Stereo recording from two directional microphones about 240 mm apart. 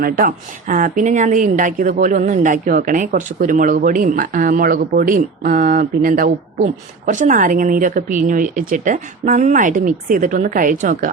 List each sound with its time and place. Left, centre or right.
0.0 s speech: right